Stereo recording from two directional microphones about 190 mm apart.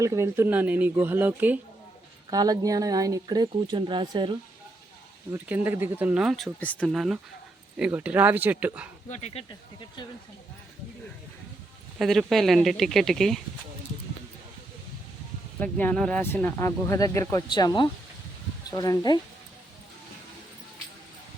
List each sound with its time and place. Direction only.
0.0 s speech: 15° right (ahead or behind)
2.3 s speech: 20° right (ahead or behind)
5.3 s speech: 10° right (ahead or behind)
9.0 s speech: 35° left (ahead or behind)
11.9 s speech: centre (ahead or behind)
15.6 s speech: 10° left (ahead or behind)